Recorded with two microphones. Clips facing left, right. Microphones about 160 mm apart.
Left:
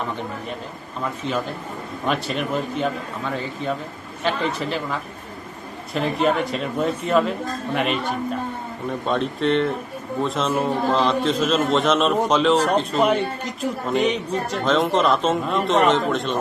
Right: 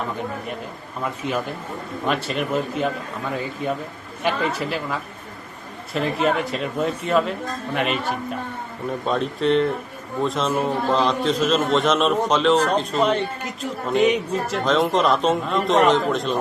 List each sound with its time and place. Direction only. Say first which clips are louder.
1.2 s a man's voice: even; 10° right (ahead or behind)
2.0 s speech: even; centre (ahead or behind)
9.0 s speech: even; centre (ahead or behind)